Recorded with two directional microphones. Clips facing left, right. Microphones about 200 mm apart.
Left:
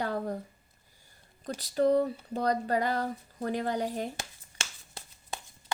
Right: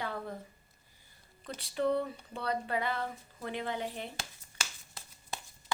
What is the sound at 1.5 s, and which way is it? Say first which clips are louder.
A woman's voice: left 6 dB; 40° left (ahead or behind).